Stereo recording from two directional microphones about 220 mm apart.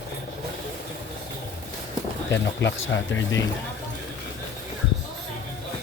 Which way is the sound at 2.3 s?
55° left (ahead or behind).